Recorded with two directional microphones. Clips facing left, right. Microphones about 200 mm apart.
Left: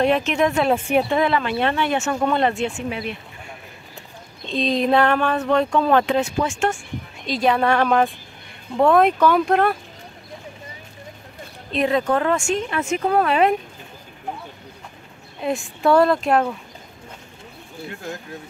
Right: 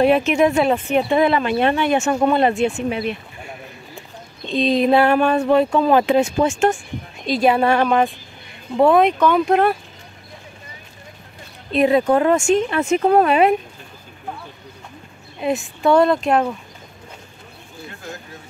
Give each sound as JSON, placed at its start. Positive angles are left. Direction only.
{"t": 0.0, "sound": "speech", "side_deg": -5}
{"t": 0.7, "sound": "speech", "side_deg": 5}
{"t": 1.1, "sound": "speech", "side_deg": -15}
{"t": 4.5, "sound": "speech", "side_deg": -5}
{"t": 7.2, "sound": "speech", "side_deg": -10}
{"t": 11.7, "sound": "speech", "side_deg": -10}
{"t": 12.8, "sound": "speech", "side_deg": -35}
{"t": 13.2, "sound": "speech", "side_deg": -10}
{"t": 15.4, "sound": "speech", "side_deg": 0}